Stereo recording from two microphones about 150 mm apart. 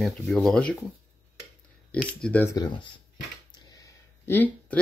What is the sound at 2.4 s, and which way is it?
Speech, 25° left (ahead or behind).